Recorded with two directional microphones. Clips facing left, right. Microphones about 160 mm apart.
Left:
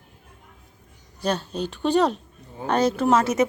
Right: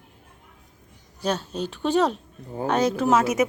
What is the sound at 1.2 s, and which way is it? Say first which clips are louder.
A woman's voice: left 1 dB; 5° right (ahead or behind).